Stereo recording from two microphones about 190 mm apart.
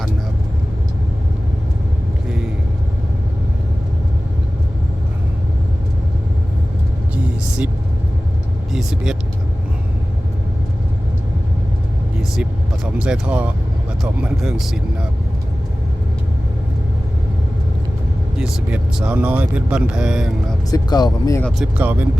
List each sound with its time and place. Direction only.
8.7 s vehicle: centre (ahead or behind)
12.4 s speech: 5° right (ahead or behind)
18.3 s speech: 5° right (ahead or behind)
20.7 s speech: 20° left (ahead or behind)
21.4 s speech: 5° right (ahead or behind)